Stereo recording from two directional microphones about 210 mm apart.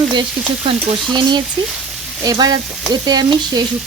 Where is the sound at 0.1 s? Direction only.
25° right (ahead or behind).